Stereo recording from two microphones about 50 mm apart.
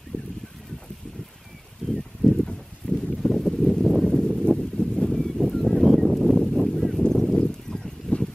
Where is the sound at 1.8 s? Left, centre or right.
Centre.